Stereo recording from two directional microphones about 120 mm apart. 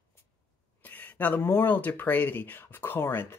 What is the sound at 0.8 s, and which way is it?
Speech, 15° left (ahead or behind).